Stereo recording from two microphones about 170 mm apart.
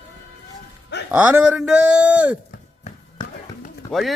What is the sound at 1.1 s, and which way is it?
A man's voice, 10° right (ahead or behind).